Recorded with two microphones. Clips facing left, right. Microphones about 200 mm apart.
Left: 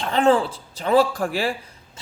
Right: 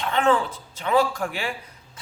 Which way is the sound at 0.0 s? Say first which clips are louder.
Left 3 dB; 35° left (ahead or behind).